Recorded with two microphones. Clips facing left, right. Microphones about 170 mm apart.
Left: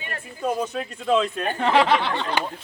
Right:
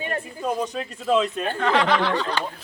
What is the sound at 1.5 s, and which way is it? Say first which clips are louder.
Speech: left 2 dB; 30° left (ahead or behind).